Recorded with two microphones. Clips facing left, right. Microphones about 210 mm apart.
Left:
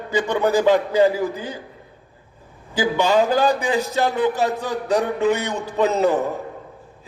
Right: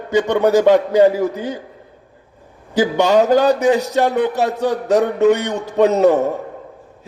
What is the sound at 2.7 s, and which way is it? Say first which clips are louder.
A man's voice: right 4 dB; 70° right (ahead or behind).